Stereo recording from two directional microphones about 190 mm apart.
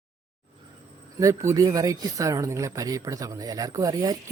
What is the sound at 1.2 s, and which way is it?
Speech, 15° right (ahead or behind).